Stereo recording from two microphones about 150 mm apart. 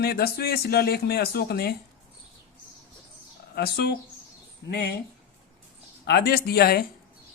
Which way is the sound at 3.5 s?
90° left.